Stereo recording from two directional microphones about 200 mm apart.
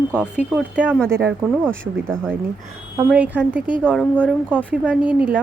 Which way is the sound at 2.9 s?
5° right (ahead or behind).